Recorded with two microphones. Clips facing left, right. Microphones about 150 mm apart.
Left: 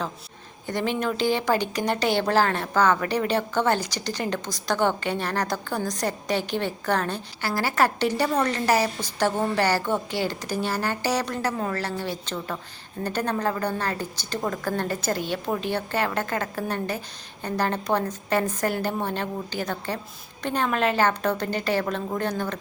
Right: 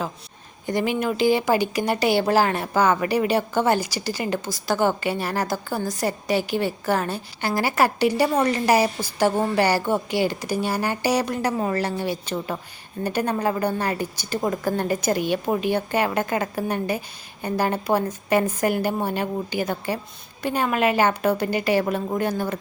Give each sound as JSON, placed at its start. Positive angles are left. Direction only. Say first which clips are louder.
{"t": 0.7, "sound": "speech", "louder": "right 3 dB", "side_deg": -10}